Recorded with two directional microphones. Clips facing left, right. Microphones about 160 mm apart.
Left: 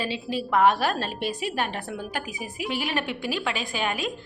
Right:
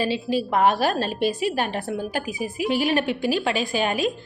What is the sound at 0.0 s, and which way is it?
A woman's voice, 35° right (ahead or behind).